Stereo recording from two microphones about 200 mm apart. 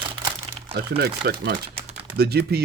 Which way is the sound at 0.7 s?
50° right (ahead or behind).